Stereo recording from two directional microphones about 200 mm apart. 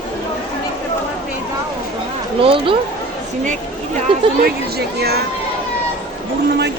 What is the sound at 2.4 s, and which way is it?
Speech, 25° right (ahead or behind).